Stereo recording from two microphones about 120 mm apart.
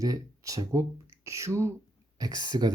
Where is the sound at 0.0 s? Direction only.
30° right (ahead or behind).